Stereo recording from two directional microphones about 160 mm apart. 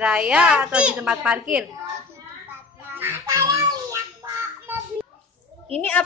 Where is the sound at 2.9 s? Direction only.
15° right (ahead or behind).